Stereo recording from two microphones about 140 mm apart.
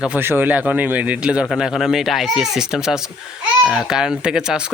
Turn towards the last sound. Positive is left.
turn(degrees=-5)  # may be behind; listen again after turning